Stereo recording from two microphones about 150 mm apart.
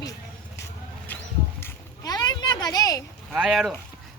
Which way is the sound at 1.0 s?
15° left (ahead or behind).